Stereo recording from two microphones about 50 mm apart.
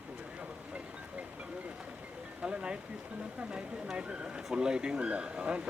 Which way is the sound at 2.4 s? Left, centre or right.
Right.